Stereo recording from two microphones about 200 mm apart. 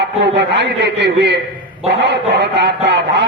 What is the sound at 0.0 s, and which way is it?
A man's voice, 60° right (ahead or behind).